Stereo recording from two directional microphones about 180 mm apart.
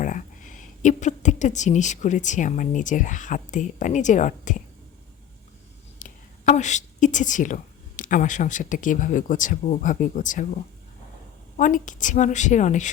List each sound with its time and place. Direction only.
0.0 s a woman's voice: 45° left (ahead or behind)
6.0 s a woman's voice: 40° left (ahead or behind)
11.5 s a woman's voice: 45° left (ahead or behind)